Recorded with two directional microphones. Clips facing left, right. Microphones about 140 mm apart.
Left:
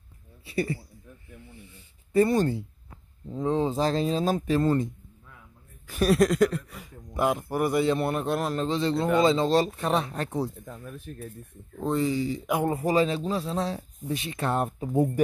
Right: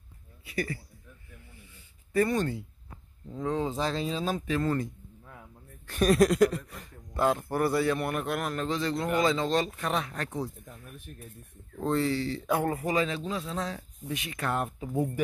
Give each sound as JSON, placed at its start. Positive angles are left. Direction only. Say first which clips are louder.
{"t": 0.5, "sound": "speech", "louder": "left 4 dB", "side_deg": 30}
{"t": 2.1, "sound": "speech", "louder": "left 5 dB", "side_deg": 30}
{"t": 5.9, "sound": "speech", "louder": "left 1 dB", "side_deg": 0}
{"t": 7.2, "sound": "a man's voice", "louder": "left 1 dB", "side_deg": 15}
{"t": 10.7, "sound": "speech", "louder": "left 7 dB", "side_deg": 90}
{"t": 11.8, "sound": "speech", "louder": "left 2 dB", "side_deg": 15}
{"t": 12.7, "sound": "speech", "louder": "left 5 dB", "side_deg": 30}